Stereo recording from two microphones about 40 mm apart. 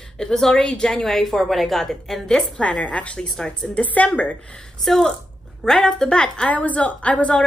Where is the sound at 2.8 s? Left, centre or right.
Left.